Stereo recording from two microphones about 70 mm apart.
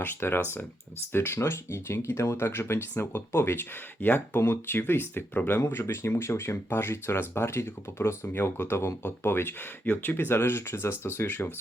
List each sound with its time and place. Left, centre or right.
0.0 s speech: left